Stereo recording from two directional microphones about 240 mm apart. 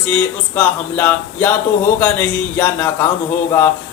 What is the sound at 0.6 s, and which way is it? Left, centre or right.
Speech, centre.